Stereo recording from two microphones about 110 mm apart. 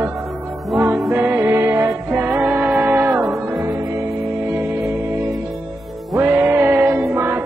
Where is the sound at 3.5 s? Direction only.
35° right (ahead or behind).